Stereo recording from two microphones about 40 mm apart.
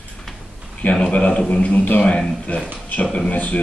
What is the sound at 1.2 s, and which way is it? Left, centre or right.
Speech, left.